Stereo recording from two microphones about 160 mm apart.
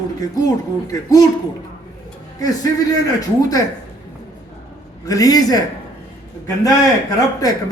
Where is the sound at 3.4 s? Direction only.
20° left (ahead or behind).